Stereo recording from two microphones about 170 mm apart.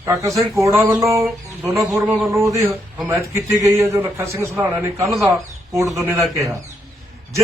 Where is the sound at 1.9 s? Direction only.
Centre (ahead or behind).